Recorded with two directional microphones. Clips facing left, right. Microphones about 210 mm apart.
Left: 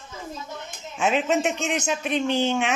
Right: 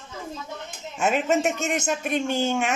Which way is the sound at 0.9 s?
5° right (ahead or behind).